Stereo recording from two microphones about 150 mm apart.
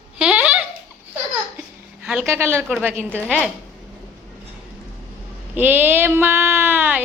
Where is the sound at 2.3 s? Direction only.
15° right (ahead or behind).